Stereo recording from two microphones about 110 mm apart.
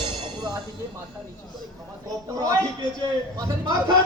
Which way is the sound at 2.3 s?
35° right (ahead or behind).